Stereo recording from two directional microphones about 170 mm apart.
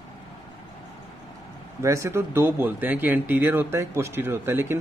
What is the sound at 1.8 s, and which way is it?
Speech, 15° right (ahead or behind).